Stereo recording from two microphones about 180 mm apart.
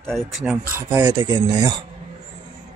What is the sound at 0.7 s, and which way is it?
Speech, 20° right (ahead or behind).